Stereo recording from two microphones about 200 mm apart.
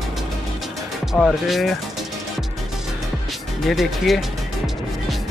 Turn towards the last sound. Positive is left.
turn(degrees=0)  # may be behind; listen again after turning